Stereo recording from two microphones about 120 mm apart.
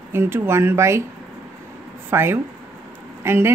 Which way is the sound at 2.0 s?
20° right (ahead or behind).